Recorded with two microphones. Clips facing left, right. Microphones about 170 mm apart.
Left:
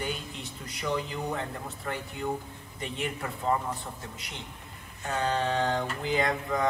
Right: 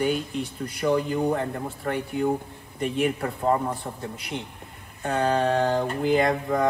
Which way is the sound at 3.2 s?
45° right (ahead or behind).